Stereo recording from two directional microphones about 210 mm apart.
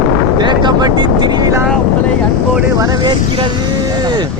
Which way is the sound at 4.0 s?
20° right (ahead or behind).